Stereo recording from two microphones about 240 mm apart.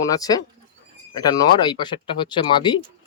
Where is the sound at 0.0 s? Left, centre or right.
Centre.